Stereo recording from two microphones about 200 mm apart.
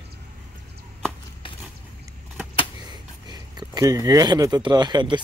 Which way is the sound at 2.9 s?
20° right (ahead or behind).